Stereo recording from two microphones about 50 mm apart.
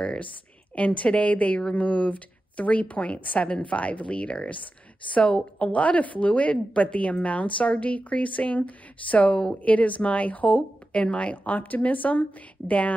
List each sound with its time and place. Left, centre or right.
0.0 s a woman's voice: centre
5.6 s a woman's voice: left